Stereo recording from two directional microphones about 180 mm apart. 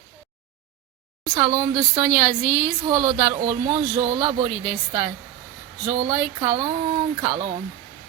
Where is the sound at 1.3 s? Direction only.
25° right (ahead or behind).